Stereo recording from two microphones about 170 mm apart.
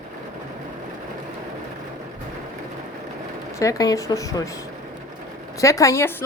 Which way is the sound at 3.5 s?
20° left (ahead or behind).